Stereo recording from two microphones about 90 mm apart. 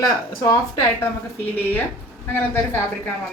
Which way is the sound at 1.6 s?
20° left (ahead or behind).